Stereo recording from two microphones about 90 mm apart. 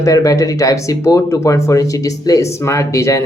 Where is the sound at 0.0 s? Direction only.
40° left (ahead or behind).